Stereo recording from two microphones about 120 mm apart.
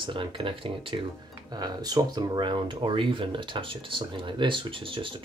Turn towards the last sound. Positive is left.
turn(degrees=-45)  # may be behind; listen again after turning